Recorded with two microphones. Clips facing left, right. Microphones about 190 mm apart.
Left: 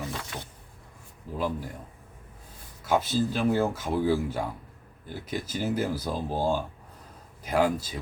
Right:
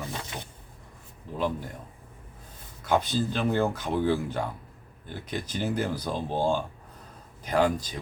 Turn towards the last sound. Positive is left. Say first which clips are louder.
# even
turn(degrees=5)  # may be behind; listen again after turning